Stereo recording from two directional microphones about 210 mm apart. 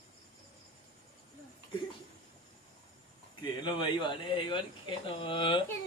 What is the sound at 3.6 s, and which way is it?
Speech, 20° left (ahead or behind).